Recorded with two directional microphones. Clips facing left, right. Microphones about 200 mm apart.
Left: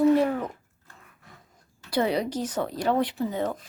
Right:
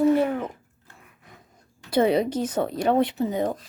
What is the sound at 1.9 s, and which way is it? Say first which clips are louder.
Speech: right 5 dB; 20° right (ahead or behind).